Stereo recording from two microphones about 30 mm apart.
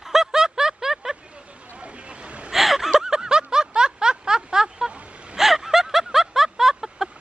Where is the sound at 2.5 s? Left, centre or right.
Centre.